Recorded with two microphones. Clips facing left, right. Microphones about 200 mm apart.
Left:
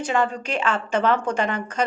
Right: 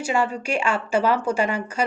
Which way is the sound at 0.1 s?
10° right (ahead or behind).